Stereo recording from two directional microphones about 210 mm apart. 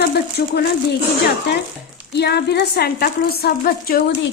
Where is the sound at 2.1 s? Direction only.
50° left (ahead or behind).